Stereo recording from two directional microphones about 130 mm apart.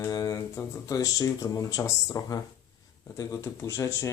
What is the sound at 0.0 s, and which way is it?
Speech, 25° left (ahead or behind).